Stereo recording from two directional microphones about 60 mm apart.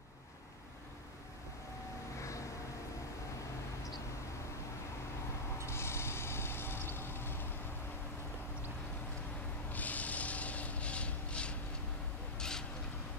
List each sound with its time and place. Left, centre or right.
5.7 s vehicle: left
9.7 s rub: left
12.4 s a sound: centre